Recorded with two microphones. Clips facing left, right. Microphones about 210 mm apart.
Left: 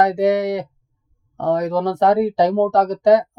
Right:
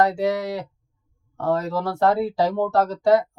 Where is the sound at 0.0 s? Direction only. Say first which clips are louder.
Left 5 dB; 20° left (ahead or behind).